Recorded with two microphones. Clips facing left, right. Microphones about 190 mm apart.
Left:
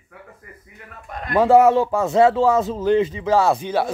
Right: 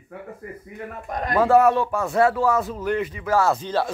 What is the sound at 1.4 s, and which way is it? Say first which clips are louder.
Speech: left 3 dB; 20° left (ahead or behind).